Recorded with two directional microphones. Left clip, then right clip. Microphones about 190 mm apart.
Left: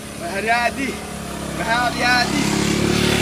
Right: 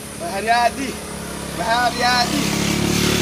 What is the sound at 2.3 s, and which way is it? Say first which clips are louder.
Vehicle: left 1 dB; 50° right (ahead or behind).